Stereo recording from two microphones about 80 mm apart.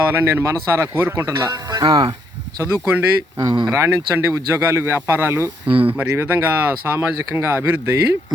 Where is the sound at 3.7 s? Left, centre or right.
Right.